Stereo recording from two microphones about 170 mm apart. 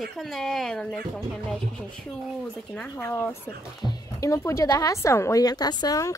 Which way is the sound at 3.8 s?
20° left (ahead or behind).